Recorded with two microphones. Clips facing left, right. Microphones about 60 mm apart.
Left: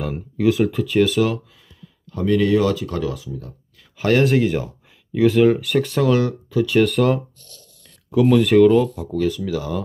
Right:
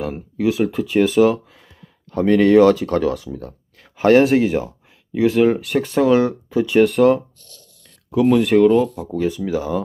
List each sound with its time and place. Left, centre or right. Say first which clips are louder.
0.0 s speech: left 1 dB; centre
0.8 s speech: right 6 dB; right
2.0 s speech: right 4 dB; right
3.9 s a sound: right 6 dB; right
4.2 s speech: right 2 dB; centre
5.8 s speech: right 3 dB; right
7.0 s speech: right 4 dB; centre